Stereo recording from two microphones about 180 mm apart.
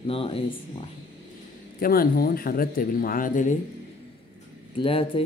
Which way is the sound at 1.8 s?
55° left (ahead or behind).